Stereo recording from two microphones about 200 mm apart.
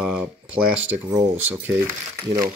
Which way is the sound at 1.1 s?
15° right (ahead or behind).